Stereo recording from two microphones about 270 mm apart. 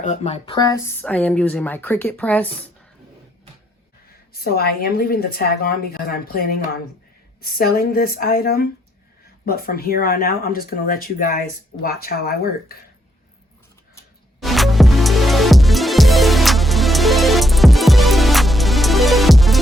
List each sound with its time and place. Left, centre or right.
0.0 s speech: left; by 2.5 s centre
4.4 s speech: left
14.4 s music: centre